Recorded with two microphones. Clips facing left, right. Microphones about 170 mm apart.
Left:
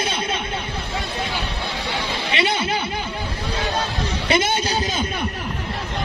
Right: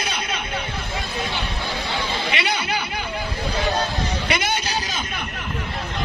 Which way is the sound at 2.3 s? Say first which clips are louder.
Left 7 dB; 25° left (ahead or behind).